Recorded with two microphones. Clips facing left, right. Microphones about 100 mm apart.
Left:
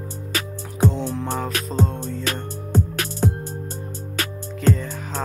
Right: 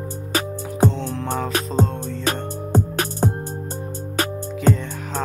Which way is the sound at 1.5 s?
40° right (ahead or behind).